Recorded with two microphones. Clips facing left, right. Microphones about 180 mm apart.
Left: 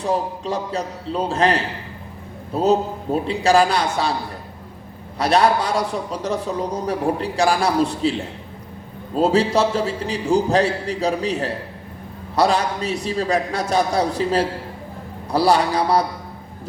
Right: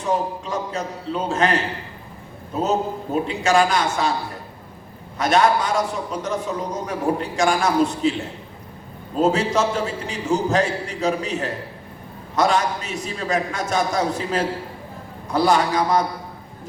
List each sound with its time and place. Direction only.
0.0 s a man's voice: 35° left (ahead or behind)
5.1 s a man's voice: 35° left (ahead or behind)
9.1 s a man's voice: 35° left (ahead or behind)